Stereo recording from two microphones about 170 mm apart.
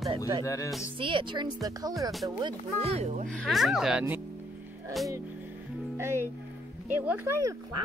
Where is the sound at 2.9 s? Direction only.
45° right (ahead or behind).